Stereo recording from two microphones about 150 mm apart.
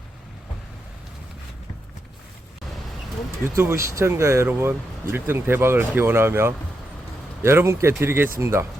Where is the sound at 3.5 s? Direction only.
20° right (ahead or behind).